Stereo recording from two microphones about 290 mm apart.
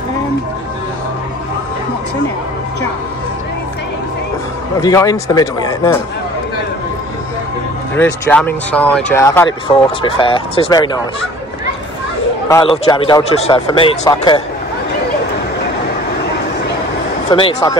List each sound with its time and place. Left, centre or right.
4.7 s speech: centre
7.9 s speech: centre
12.4 s speech: centre
17.3 s speech: centre